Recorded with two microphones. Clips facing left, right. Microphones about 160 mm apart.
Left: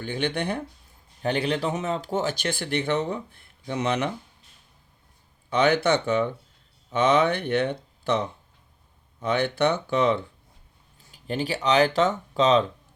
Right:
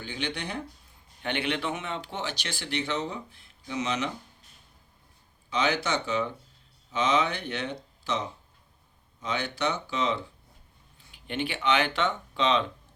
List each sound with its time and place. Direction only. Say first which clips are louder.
0.0 s speech: left 7 dB; 55° left (ahead or behind)
1.2 s speech: left 5 dB; 35° left (ahead or behind); by 4.1 s 60° left (ahead or behind)
5.5 s speech: left 7 dB; 55° left (ahead or behind)
11.1 s speech: left 4 dB; 35° left (ahead or behind)